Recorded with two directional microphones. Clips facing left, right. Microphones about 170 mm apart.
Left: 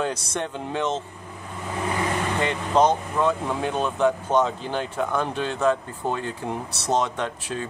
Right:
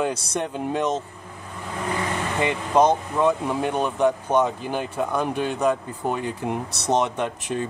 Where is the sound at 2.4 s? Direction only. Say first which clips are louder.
Right 2 dB; 15° right (ahead or behind).